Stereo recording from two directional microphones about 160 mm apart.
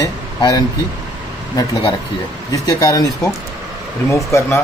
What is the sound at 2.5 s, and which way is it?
Speech, 20° left (ahead or behind).